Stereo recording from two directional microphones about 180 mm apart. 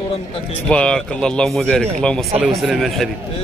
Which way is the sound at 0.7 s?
5° left (ahead or behind).